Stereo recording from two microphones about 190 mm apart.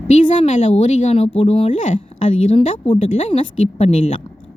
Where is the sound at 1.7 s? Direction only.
40° left (ahead or behind).